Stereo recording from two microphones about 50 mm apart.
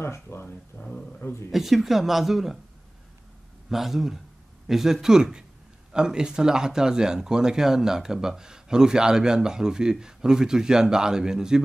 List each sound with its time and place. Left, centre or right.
0.0 s speech: left
0.7 s speech: left
1.2 s speech: left
1.5 s speech: centre
3.6 s speech: centre